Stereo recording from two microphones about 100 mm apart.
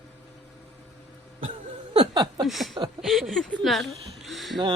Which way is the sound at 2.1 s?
45° right (ahead or behind).